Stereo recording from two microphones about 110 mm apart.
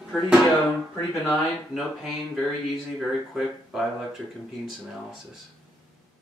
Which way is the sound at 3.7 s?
5° right (ahead or behind).